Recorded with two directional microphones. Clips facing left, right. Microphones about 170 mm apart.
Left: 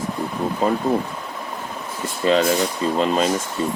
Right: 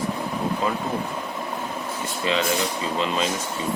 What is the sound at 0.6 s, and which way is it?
Speech, 45° left (ahead or behind).